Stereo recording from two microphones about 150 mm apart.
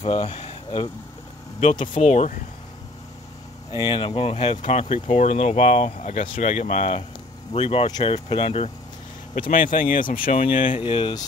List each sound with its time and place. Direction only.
0.0 s speech: 45° left (ahead or behind)
1.6 s speech: 50° left (ahead or behind)
3.7 s speech: 30° left (ahead or behind)
7.8 s speech: 30° left (ahead or behind)
9.3 s speech: 65° left (ahead or behind)
10.4 s speech: 55° left (ahead or behind)
10.8 s speech: 35° left (ahead or behind)